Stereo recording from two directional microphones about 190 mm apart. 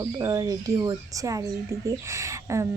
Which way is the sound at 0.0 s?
20° right (ahead or behind).